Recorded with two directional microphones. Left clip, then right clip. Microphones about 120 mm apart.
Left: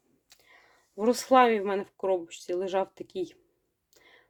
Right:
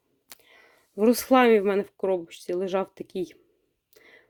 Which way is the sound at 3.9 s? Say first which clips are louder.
Right 4 dB; 45° right (ahead or behind).